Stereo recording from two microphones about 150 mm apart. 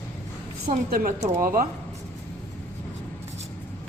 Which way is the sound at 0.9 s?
65° right (ahead or behind).